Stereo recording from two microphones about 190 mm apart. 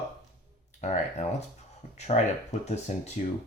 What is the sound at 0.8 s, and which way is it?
Speech, 35° left (ahead or behind).